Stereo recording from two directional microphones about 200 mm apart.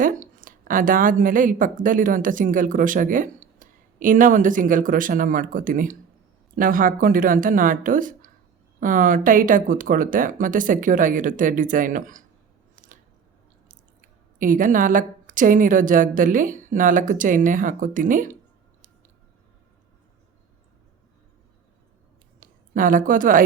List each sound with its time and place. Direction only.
0.0 s a woman's voice: 45° right (ahead or behind)
14.3 s a woman's voice: 40° right (ahead or behind)
22.4 s a sound: 45° right (ahead or behind)